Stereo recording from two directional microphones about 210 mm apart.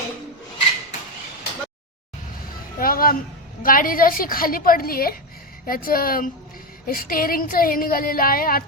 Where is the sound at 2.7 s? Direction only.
45° left (ahead or behind).